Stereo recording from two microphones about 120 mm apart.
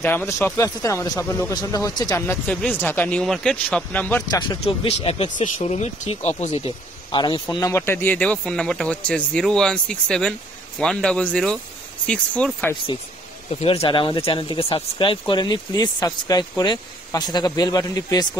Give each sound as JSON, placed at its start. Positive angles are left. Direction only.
{"t": 0.0, "sound": "speech", "side_deg": 20}
{"t": 2.2, "sound": "speech", "side_deg": 10}
{"t": 4.3, "sound": "speech", "side_deg": 40}
{"t": 4.8, "sound": "speech", "side_deg": 55}
{"t": 5.4, "sound": "speech", "side_deg": 75}
{"t": 7.1, "sound": "speech", "side_deg": 40}
{"t": 7.5, "sound": "speech", "side_deg": 25}
{"t": 13.5, "sound": "speech", "side_deg": 55}